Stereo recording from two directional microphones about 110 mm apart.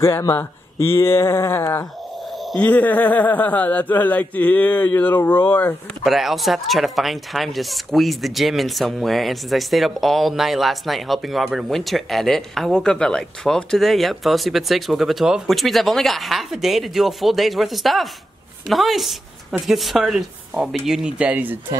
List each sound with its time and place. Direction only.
0.0 s a man's voice: 25° left (ahead or behind)
6.0 s speech: centre (ahead or behind)